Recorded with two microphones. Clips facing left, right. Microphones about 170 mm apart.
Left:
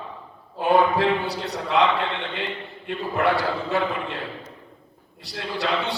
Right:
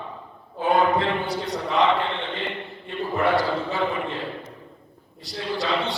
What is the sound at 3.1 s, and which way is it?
A man's voice, 65° left (ahead or behind).